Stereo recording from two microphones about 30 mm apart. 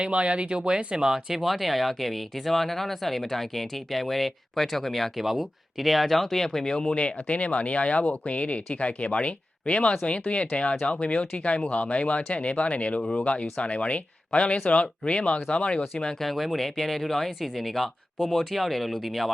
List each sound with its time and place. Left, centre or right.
0.0 s speech: right
0.9 s speech: centre
1.4 s speech: centre
5.1 s speech: centre
6.4 s speech: centre
6.9 s speech: left
16.2 s speech: centre